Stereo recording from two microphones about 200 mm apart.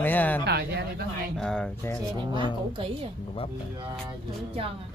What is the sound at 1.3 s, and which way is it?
Speech, 5° left (ahead or behind).